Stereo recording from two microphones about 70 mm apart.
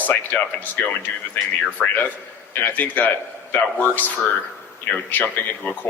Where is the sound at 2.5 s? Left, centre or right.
Left.